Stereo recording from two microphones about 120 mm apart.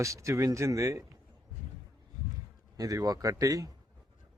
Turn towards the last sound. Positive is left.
turn(degrees=-30)  # may be behind; listen again after turning